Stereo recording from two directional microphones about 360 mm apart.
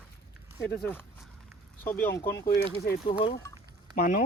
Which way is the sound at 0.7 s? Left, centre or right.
Centre.